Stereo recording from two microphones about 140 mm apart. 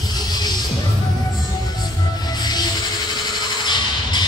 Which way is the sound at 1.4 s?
30° left (ahead or behind).